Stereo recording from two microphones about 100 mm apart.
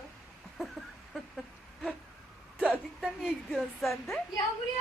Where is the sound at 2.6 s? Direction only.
10° right (ahead or behind).